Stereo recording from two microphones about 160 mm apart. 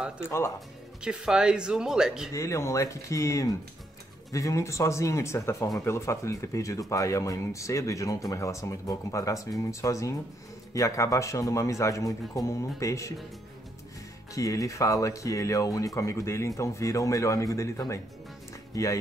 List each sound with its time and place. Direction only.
0.2 s speech: 15° left (ahead or behind)
1.0 s speech: 5° right (ahead or behind)
2.3 s speech: 20° left (ahead or behind)
14.3 s speech: 20° left (ahead or behind)